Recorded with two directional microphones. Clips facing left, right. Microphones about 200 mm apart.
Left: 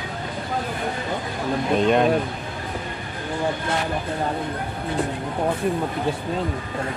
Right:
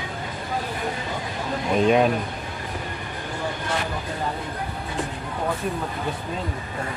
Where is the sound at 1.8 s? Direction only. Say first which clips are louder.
Right 1 dB; 5° right (ahead or behind).